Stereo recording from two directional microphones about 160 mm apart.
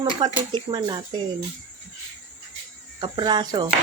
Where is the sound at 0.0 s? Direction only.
25° right (ahead or behind).